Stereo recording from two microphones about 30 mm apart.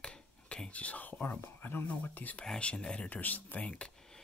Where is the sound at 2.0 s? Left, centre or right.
Left.